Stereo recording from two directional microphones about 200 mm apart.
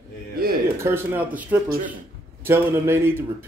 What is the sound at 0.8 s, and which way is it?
A man's voice, 10° right (ahead or behind).